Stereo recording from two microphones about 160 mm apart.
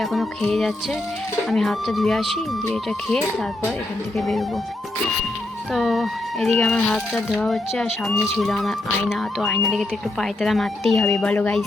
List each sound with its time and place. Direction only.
0.0 s speech: centre (ahead or behind)
5.7 s speech: centre (ahead or behind)